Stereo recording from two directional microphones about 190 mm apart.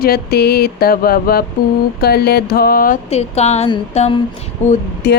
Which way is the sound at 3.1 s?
35° left (ahead or behind).